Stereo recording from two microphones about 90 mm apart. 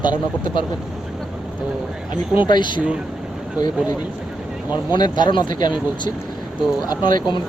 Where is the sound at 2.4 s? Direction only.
60° left (ahead or behind).